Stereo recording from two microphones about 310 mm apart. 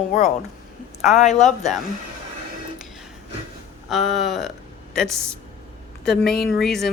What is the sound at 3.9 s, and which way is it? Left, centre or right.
Speech, centre.